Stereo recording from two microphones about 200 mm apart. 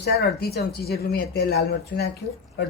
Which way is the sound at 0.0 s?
55° left (ahead or behind).